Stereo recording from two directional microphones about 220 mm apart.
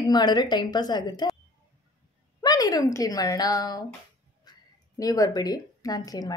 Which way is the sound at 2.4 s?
15° left (ahead or behind).